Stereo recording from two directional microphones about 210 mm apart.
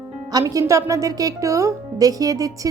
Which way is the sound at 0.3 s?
15° right (ahead or behind).